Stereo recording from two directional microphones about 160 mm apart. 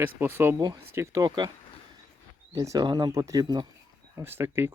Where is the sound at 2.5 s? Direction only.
25° right (ahead or behind).